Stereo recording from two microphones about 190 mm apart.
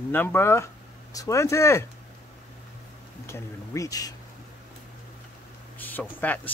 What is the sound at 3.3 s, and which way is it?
Speech, 15° left (ahead or behind).